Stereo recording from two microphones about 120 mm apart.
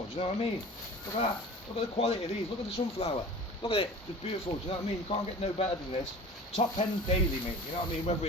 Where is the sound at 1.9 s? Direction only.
60° left (ahead or behind).